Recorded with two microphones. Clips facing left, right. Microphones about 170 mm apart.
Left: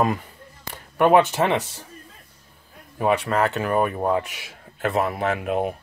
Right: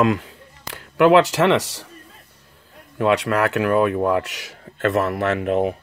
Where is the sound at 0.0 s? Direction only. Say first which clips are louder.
Right 4 dB; 80° right.